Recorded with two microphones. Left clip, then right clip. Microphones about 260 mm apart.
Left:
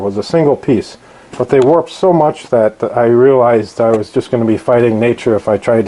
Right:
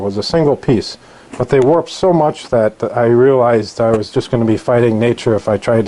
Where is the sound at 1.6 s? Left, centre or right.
Centre.